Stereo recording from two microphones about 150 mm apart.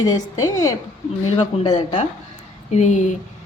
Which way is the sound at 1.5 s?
45° left (ahead or behind).